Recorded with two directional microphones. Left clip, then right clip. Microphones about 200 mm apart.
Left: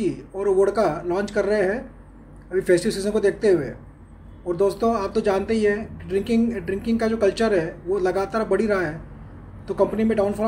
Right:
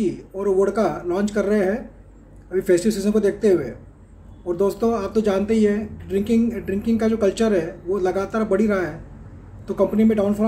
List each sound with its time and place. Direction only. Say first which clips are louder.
0.0 s speech: even; 10° right (ahead or behind)